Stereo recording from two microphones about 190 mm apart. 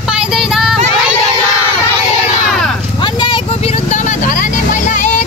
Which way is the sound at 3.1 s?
25° left (ahead or behind).